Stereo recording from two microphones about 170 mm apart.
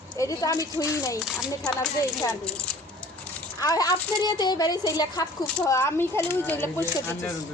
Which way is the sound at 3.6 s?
20° left (ahead or behind).